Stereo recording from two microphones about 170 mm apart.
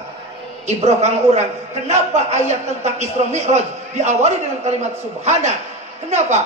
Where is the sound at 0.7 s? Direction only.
40° right (ahead or behind).